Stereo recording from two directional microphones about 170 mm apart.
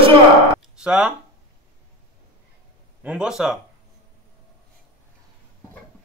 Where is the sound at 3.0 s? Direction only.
5° right (ahead or behind).